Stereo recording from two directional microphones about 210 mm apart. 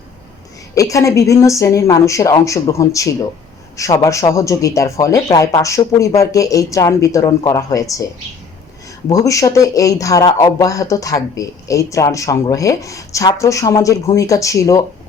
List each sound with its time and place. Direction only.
0.8 s speech: 15° left (ahead or behind)
9.0 s speech: 15° left (ahead or behind)